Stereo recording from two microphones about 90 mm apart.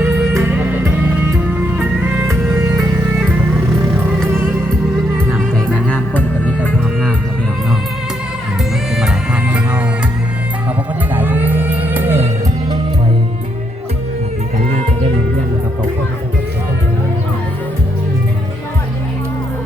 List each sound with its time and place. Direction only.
0.0 s music: 25° right (ahead or behind)
4.3 s music: 25° right (ahead or behind)
5.3 s music: 10° left (ahead or behind)
9.0 s music: 10° right (ahead or behind)
11.1 s music: 20° right (ahead or behind)